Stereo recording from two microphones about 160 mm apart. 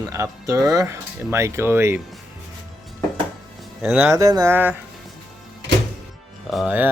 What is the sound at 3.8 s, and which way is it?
Speech, 10° right (ahead or behind).